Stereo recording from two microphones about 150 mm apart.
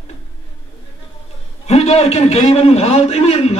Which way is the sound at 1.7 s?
45° left (ahead or behind).